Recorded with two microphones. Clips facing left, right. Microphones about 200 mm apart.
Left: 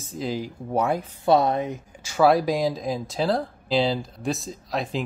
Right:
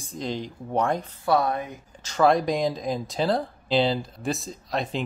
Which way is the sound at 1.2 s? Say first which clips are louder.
Left 4 dB; 20° left (ahead or behind).